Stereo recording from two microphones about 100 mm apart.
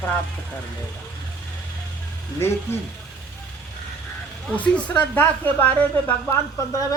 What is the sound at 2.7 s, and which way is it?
Speech, 25° left (ahead or behind).